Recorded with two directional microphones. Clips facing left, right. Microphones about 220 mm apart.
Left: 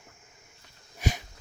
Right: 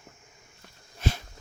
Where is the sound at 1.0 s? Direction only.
15° left (ahead or behind).